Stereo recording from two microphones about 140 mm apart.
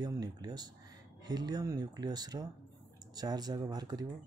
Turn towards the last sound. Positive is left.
turn(degrees=-30)  # may be behind; listen again after turning